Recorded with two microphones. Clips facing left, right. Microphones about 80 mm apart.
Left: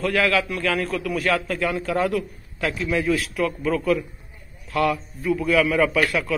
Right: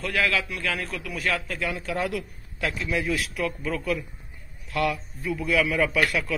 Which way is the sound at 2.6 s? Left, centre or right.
Left.